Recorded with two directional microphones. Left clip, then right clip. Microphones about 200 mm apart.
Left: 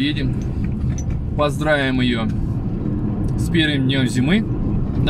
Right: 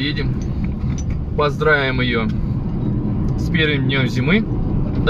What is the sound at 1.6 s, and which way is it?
Speech, 15° left (ahead or behind).